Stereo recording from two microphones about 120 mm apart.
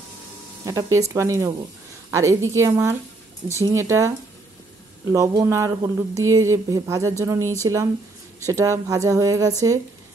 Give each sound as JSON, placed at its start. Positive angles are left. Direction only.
{"t": 0.7, "sound": "speech", "side_deg": -30}
{"t": 5.1, "sound": "speech", "side_deg": -30}